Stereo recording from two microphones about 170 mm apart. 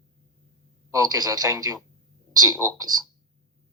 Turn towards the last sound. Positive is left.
turn(degrees=-20)  # may be behind; listen again after turning